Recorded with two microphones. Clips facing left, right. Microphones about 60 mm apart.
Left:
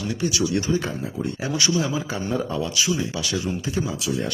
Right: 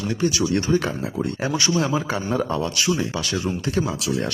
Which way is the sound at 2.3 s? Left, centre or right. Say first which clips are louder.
Right 1 dB; right.